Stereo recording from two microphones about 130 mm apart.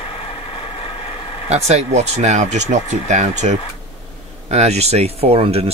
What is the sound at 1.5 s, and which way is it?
Speech, 55° right (ahead or behind).